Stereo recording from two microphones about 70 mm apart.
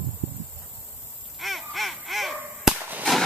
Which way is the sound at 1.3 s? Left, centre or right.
Centre.